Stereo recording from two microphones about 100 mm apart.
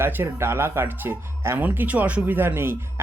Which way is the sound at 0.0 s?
25° right (ahead or behind).